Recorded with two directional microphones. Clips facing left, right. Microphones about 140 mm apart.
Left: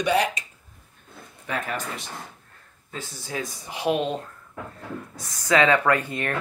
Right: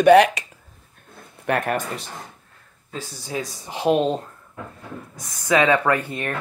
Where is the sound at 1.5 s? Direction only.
60° right (ahead or behind).